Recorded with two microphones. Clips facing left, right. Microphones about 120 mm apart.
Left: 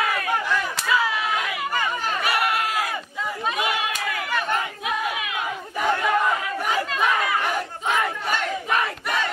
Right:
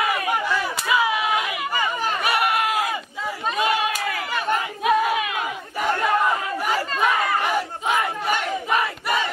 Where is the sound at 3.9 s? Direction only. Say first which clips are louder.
Even; 5° right (ahead or behind).